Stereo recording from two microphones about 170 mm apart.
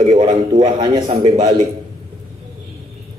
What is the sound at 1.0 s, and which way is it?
Speech, 45° right (ahead or behind).